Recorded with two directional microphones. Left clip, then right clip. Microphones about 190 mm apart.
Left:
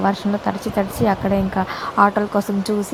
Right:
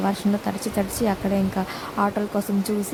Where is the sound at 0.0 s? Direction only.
Centre (ahead or behind).